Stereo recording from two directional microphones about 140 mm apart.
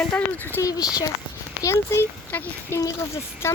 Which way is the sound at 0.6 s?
25° left (ahead or behind).